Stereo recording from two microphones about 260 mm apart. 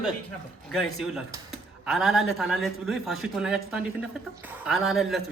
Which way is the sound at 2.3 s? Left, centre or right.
Centre.